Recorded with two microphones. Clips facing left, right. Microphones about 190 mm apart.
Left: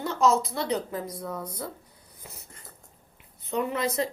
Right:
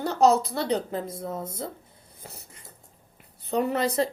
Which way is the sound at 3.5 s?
35° right (ahead or behind).